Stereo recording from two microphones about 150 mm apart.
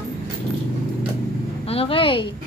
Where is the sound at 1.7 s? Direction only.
40° left (ahead or behind).